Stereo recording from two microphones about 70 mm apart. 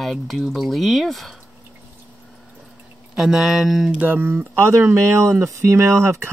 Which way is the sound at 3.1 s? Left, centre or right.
Centre.